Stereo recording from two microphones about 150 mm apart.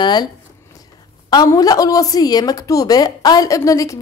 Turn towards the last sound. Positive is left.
turn(degrees=20)  # may be behind; listen again after turning